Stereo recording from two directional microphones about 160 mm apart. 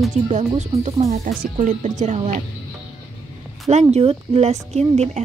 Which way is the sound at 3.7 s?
45° right (ahead or behind).